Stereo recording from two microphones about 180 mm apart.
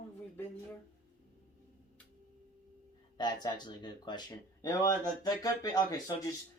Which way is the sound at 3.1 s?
25° left (ahead or behind).